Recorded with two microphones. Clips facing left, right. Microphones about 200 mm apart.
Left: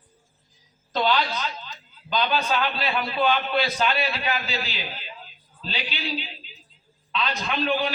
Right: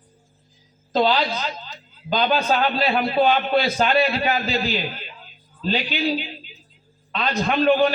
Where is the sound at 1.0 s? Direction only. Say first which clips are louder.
Right 4 dB; 30° right (ahead or behind).